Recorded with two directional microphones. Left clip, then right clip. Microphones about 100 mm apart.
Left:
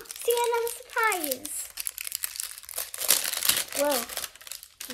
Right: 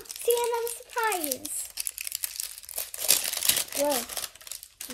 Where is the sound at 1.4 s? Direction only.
5° left (ahead or behind).